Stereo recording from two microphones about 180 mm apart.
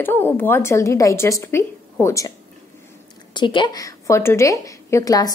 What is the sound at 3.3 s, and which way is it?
A woman's voice, 25° left (ahead or behind).